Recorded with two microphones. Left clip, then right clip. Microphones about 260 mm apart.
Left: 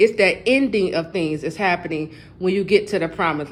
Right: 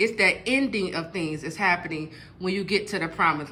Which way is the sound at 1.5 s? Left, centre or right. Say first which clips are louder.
Even; centre.